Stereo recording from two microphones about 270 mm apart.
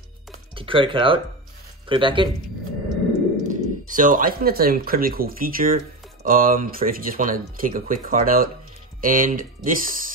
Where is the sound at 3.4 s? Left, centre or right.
Right.